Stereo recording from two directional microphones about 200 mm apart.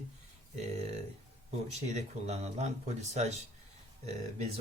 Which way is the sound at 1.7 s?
35° right (ahead or behind).